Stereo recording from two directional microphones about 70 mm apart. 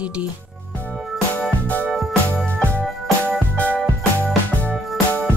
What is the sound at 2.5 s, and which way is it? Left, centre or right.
Music, left.